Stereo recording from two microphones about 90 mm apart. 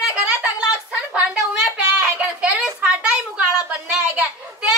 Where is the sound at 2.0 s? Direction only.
15° right (ahead or behind).